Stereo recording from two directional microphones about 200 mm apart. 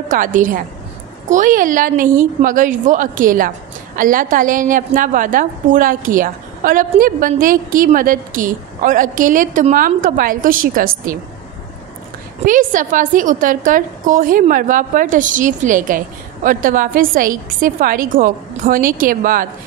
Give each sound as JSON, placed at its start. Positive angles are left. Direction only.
{"t": 0.1, "sound": "a woman's voice", "side_deg": -40}
{"t": 12.4, "sound": "a woman's voice", "side_deg": -40}